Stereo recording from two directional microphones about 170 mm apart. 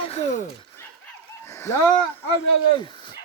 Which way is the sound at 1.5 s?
15° left (ahead or behind).